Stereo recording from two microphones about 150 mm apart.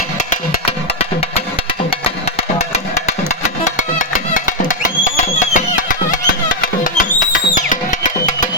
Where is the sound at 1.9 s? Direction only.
40° left (ahead or behind).